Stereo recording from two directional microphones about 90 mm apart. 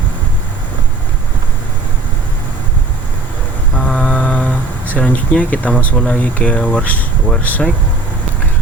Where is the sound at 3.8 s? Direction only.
10° left (ahead or behind).